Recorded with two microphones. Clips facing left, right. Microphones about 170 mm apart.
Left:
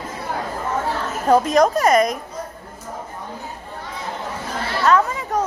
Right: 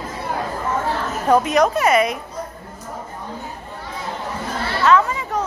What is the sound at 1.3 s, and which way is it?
Speech, 35° left (ahead or behind).